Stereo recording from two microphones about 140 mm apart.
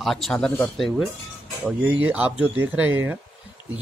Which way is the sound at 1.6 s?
10° right (ahead or behind).